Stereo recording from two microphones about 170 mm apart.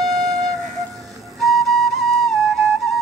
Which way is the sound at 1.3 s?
Centre (ahead or behind).